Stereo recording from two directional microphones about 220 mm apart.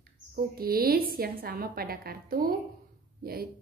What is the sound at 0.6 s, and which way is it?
A woman's voice, 40° right (ahead or behind).